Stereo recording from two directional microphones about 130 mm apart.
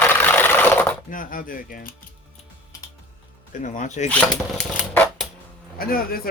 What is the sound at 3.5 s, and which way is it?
Speech, 80° left.